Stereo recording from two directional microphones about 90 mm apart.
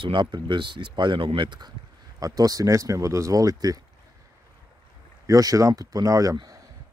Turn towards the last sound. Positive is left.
turn(degrees=-45)  # may be behind; listen again after turning